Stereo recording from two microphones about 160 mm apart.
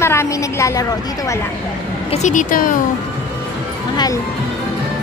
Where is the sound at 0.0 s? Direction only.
15° left (ahead or behind).